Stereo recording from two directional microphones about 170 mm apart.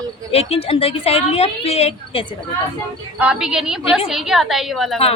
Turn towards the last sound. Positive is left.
turn(degrees=0)  # may be behind; listen again after turning